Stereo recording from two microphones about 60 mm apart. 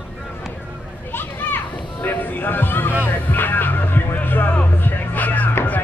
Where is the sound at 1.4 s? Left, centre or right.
Left.